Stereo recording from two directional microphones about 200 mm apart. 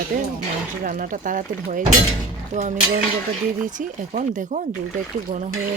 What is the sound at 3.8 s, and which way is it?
Speech, 40° right (ahead or behind).